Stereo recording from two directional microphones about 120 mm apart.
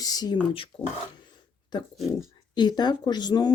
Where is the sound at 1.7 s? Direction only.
40° left (ahead or behind).